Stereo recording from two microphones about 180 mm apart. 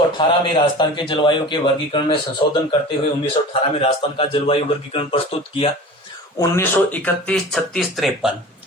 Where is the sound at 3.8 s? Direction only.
30° left (ahead or behind).